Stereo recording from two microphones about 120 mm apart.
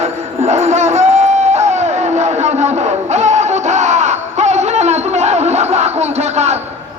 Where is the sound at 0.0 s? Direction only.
70° right (ahead or behind).